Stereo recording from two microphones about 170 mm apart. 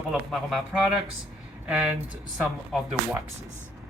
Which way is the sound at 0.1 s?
Centre (ahead or behind).